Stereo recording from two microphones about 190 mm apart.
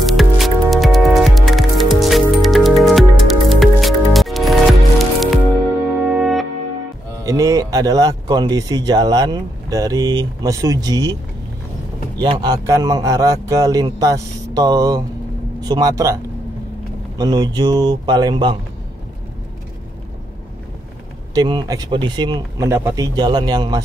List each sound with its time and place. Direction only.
0.0 s music: centre (ahead or behind)
7.2 s speech: 15° right (ahead or behind)
12.2 s speech: 25° right (ahead or behind)
17.2 s speech: 20° right (ahead or behind)
21.4 s speech: 20° right (ahead or behind)